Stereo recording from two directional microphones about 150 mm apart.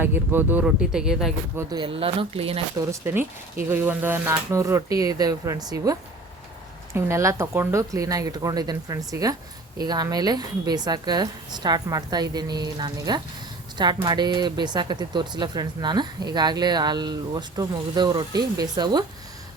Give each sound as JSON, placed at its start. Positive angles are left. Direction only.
{"t": 0.0, "sound": "speech", "side_deg": -15}
{"t": 1.8, "sound": "speech", "side_deg": -40}
{"t": 2.7, "sound": "speech", "side_deg": -15}